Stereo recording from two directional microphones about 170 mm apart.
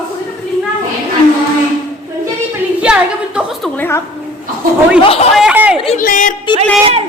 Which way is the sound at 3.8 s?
15° left (ahead or behind).